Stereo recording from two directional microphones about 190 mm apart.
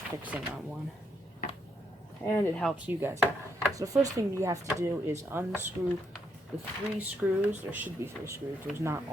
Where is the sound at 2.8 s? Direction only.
10° right (ahead or behind).